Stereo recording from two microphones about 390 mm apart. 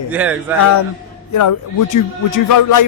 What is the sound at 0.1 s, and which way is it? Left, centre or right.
Speech, centre.